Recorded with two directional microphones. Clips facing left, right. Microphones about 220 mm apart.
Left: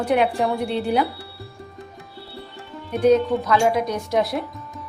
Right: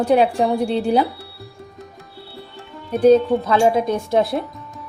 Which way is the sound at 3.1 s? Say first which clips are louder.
Right 3 dB; 30° right (ahead or behind).